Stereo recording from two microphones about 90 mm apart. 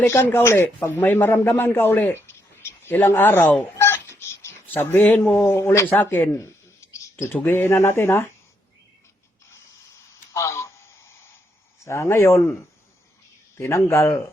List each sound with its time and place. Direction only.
0.0 s speech: 25° left (ahead or behind)
3.8 s cat: 30° left (ahead or behind)
6.0 s a sound: 25° left (ahead or behind)
7.4 s speech: 25° left (ahead or behind)
10.3 s radio: 35° left (ahead or behind)
11.9 s speech: 30° left (ahead or behind)
13.6 s speech: 30° left (ahead or behind)